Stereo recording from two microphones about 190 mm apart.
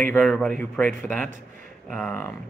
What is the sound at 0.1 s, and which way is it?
Speech, 5° left (ahead or behind).